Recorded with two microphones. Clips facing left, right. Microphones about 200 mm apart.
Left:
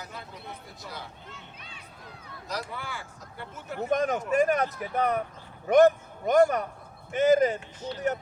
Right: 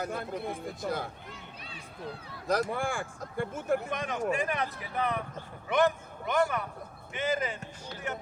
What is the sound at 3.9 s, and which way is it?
A man's voice, 45° left (ahead or behind).